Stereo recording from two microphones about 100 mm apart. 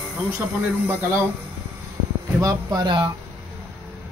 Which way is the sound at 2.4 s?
45° right (ahead or behind).